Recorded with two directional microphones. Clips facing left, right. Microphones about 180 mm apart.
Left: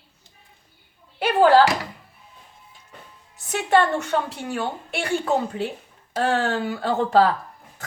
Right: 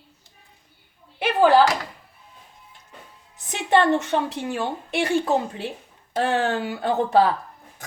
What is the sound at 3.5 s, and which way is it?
A woman's voice, 20° right (ahead or behind).